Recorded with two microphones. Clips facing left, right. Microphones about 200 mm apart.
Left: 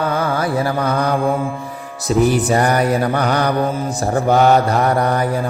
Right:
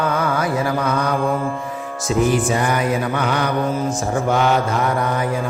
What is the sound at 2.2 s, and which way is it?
Mantra, 40° left (ahead or behind).